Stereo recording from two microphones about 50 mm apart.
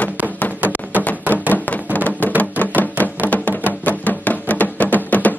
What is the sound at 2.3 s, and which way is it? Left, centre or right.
Music, left.